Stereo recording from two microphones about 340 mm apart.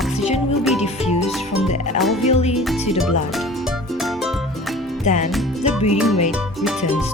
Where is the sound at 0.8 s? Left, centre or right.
Centre.